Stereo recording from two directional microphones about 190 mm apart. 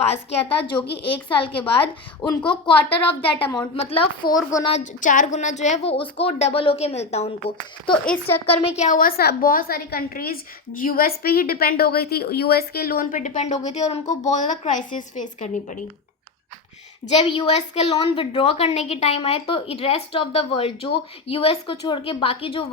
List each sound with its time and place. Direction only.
0.0 s a woman's voice: 35° left (ahead or behind)
4.7 s a woman's voice: 40° left (ahead or behind)
8.0 s speech: 10° left (ahead or behind)
8.8 s a woman's voice: 45° left (ahead or behind)
17.2 s a woman's voice: 30° left (ahead or behind)